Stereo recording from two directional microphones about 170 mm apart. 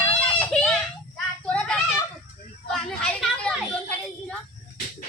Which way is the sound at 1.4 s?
5° left (ahead or behind).